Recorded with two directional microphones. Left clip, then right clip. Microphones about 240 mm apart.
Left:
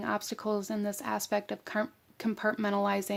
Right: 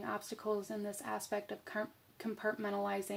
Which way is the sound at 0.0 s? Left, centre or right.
Left.